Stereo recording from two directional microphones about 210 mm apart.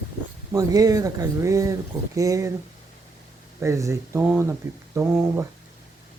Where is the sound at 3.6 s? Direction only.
15° right (ahead or behind).